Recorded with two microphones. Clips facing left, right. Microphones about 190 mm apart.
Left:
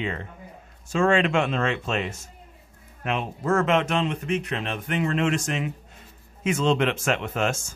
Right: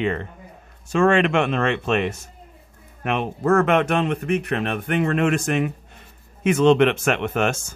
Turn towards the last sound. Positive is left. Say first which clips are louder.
# right 4 dB
turn(degrees=-65)  # may be behind; listen again after turning